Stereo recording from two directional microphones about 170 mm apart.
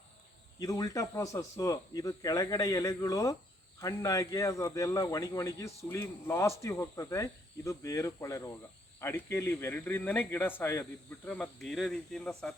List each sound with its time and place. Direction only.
0.6 s speech: 20° left (ahead or behind); by 12.5 s 5° left (ahead or behind)